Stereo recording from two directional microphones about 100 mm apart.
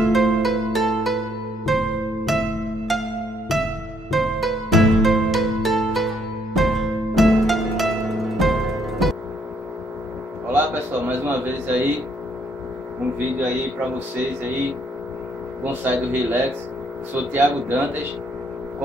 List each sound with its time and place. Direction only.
0.0 s music: centre (ahead or behind)
10.5 s a sound: 20° right (ahead or behind)
15.6 s speech: 20° right (ahead or behind)